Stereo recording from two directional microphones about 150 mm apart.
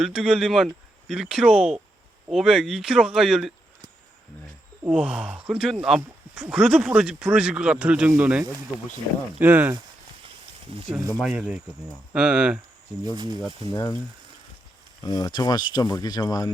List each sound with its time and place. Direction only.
0.0 s speech: 5° right (ahead or behind)
4.9 s speech: 5° right (ahead or behind)
11.2 s speech: 5° right (ahead or behind)
13.1 s speech: 30° right (ahead or behind)
13.7 s speech: 30° left (ahead or behind)
15.0 s speech: 25° left (ahead or behind)